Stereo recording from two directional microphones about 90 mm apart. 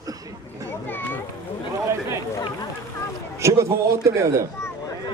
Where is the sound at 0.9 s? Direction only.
20° left (ahead or behind).